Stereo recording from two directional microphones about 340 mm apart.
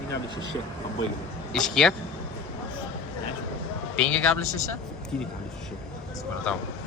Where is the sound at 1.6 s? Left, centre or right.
Centre.